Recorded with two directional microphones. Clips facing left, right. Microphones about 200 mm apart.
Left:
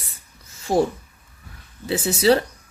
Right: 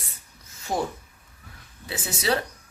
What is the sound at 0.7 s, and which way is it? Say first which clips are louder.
Speech: left 8 dB; 30° left (ahead or behind).